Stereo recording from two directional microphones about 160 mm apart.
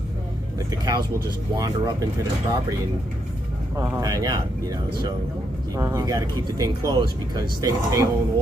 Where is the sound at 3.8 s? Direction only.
20° right (ahead or behind).